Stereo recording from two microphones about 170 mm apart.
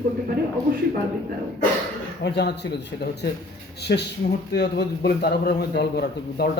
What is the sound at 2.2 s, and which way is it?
Speech, 75° left (ahead or behind).